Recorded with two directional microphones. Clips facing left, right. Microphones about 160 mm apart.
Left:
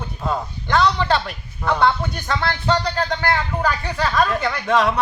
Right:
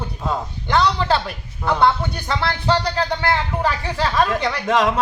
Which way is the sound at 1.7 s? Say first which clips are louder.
Right 1 dB; 15° right (ahead or behind).